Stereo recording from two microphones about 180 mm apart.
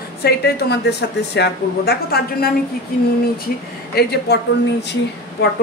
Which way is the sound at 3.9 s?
65° left (ahead or behind).